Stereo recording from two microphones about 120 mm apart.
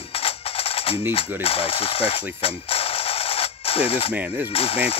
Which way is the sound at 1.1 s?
50° left (ahead or behind).